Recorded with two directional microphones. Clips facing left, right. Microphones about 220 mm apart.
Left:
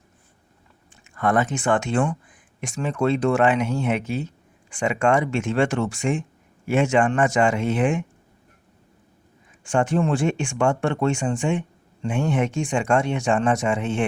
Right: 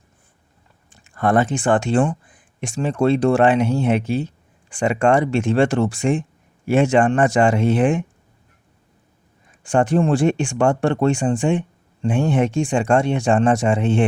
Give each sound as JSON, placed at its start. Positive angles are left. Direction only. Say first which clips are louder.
{"t": 0.9, "sound": "speech", "louder": "right 3 dB", "side_deg": -35}
{"t": 9.6, "sound": "speech", "louder": "right 4 dB", "side_deg": -35}